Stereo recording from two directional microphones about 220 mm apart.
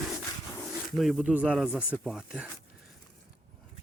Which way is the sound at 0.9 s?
Centre (ahead or behind).